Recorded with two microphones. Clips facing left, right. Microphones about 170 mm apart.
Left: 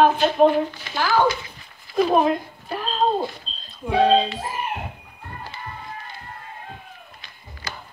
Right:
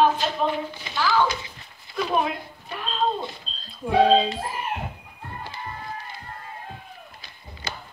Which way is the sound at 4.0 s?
5° right (ahead or behind).